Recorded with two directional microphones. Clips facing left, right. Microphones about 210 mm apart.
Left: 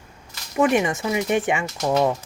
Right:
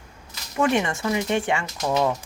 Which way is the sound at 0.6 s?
15° left (ahead or behind).